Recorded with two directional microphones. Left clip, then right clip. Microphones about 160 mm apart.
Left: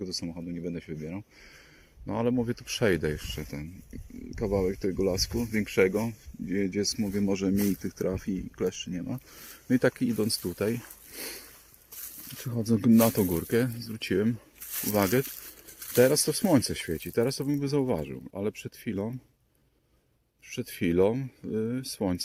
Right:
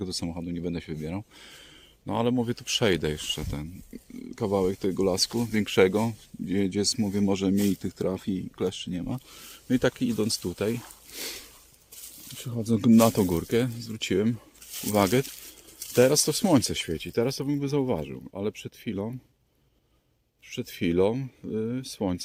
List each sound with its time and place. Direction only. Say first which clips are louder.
0.2 s speech: right 3 dB; 35° right (ahead or behind)
2.0 s speech: right 2 dB; 15° right (ahead or behind)
9.3 s speech: even; centre (ahead or behind)
12.4 s speech: even; 10° left (ahead or behind)
12.7 s speech: right 3 dB; 15° right (ahead or behind)
14.7 s a sound: right 1 dB; 10° left (ahead or behind)
14.9 s speech: right 3 dB; 15° right (ahead or behind)
20.5 s speech: right 1 dB; centre (ahead or behind)